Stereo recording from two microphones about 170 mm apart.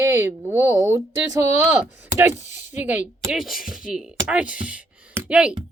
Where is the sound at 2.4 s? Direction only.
45° left (ahead or behind).